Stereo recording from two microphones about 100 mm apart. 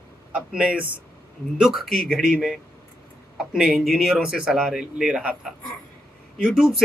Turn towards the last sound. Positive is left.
turn(degrees=-5)  # may be behind; listen again after turning